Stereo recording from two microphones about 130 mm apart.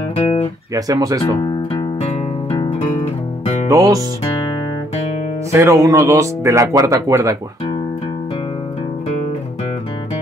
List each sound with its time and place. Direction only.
0.7 s speech: 25° right (ahead or behind)
2.5 s music: 40° left (ahead or behind)
3.6 s speech: 25° right (ahead or behind)
5.5 s speech: 25° right (ahead or behind)